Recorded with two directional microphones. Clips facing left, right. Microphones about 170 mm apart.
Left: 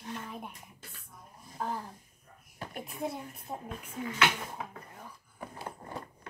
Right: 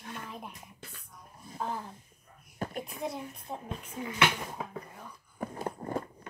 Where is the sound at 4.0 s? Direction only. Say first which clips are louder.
Right 1 dB; 15° right (ahead or behind).